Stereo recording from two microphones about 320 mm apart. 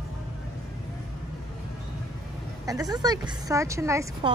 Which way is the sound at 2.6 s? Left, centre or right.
Centre.